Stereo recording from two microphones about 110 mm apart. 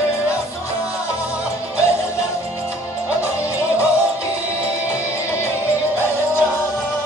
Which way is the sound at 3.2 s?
25° left (ahead or behind).